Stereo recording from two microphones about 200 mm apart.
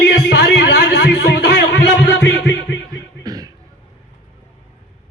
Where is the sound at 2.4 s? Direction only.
60° left (ahead or behind).